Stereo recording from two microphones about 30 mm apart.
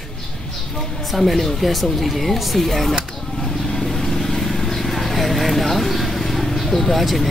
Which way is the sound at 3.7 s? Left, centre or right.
Centre.